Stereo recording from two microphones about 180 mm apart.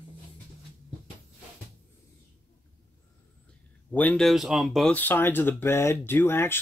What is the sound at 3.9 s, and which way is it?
Speech, 5° left (ahead or behind).